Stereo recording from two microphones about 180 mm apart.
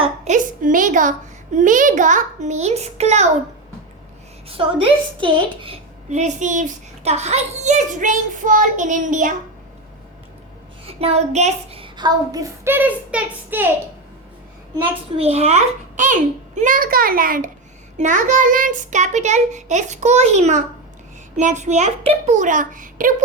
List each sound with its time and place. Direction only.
0.0 s a woman's voice: 45° right (ahead or behind)
4.4 s a woman's voice: 30° right (ahead or behind); by 9.3 s 45° right (ahead or behind)
10.8 s a child's voice: 35° right (ahead or behind); by 13.7 s 10° right (ahead or behind)
15.1 s a woman's voice: 35° right (ahead or behind)